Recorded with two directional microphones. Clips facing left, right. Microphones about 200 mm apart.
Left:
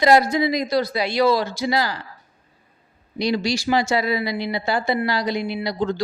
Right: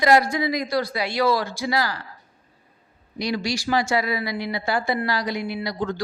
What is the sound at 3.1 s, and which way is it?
Speech, 25° left (ahead or behind).